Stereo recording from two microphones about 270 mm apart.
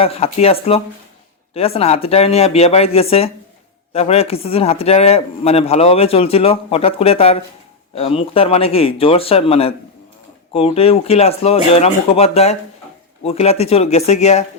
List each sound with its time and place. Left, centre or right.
0.0 s speech: left